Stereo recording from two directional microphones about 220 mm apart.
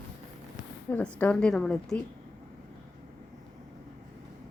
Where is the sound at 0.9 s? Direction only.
5° left (ahead or behind).